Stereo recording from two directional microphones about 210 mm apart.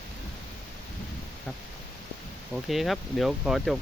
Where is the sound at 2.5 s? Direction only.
Centre (ahead or behind).